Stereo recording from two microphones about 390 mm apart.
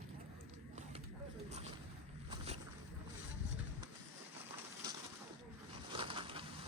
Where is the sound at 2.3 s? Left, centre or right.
Centre.